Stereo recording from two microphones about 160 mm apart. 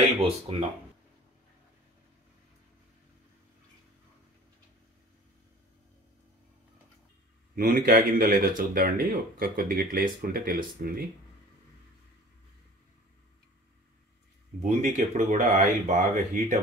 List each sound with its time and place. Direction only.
0.0 s speech: 40° right (ahead or behind)
7.5 s speech: 65° right (ahead or behind)
14.6 s speech: 50° right (ahead or behind)